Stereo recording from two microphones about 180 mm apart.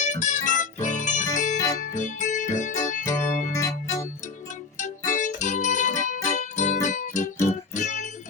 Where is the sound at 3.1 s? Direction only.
45° left (ahead or behind).